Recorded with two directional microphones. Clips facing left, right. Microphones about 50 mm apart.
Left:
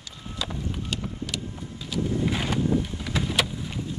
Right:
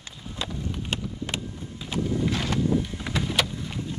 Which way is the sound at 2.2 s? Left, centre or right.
Centre.